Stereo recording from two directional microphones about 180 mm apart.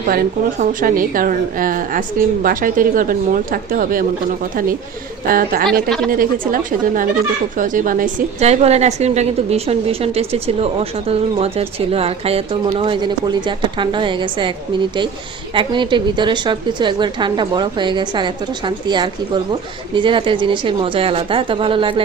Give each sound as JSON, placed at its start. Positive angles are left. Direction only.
{"t": 0.6, "sound": "a woman's voice", "side_deg": -50}
{"t": 5.3, "sound": "a woman's voice", "side_deg": -50}
{"t": 15.5, "sound": "a woman's voice", "side_deg": -25}